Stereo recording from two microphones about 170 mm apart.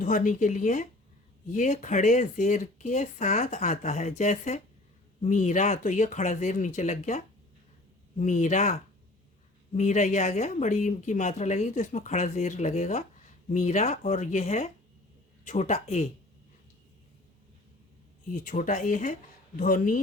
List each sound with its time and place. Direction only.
0.0 s speech: 50° left (ahead or behind)
8.2 s speech: 45° left (ahead or behind)
9.7 s speech: 45° left (ahead or behind)
18.3 s speech: 50° left (ahead or behind)